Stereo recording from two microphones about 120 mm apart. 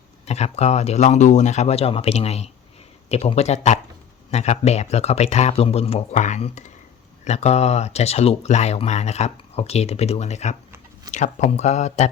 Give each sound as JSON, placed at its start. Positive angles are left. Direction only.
{"t": 0.3, "sound": "speech", "side_deg": 65}
{"t": 7.3, "sound": "speech", "side_deg": 65}